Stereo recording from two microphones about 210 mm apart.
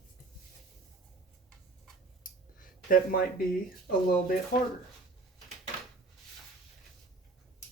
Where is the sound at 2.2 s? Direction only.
40° left (ahead or behind).